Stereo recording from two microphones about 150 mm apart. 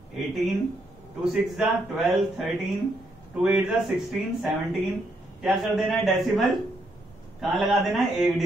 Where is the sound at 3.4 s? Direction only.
5° right (ahead or behind).